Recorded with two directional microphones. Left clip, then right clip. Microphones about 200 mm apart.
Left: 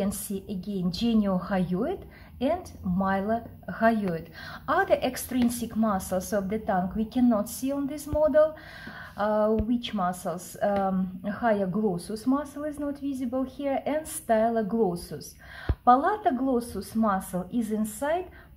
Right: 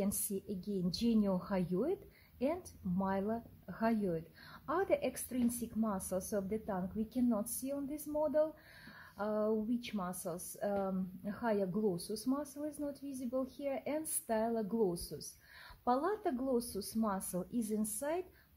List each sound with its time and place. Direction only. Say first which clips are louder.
0.0 s a woman's voice: left 8 dB; 50° right (ahead or behind)
9.1 s a sound: left 12 dB; 40° right (ahead or behind)
9.8 s a woman's voice: left 13 dB; 45° right (ahead or behind)